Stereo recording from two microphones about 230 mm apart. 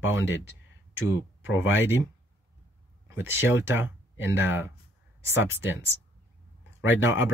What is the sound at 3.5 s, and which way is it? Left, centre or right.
Speech, centre.